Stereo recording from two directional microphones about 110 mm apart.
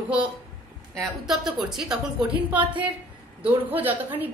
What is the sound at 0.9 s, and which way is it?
A woman's voice, 5° right (ahead or behind).